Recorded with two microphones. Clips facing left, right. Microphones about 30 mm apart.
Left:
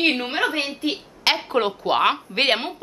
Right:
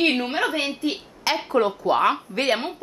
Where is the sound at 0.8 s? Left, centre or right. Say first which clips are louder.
Left 1 dB; left.